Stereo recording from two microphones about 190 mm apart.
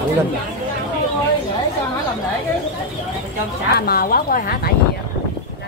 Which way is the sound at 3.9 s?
50° left (ahead or behind).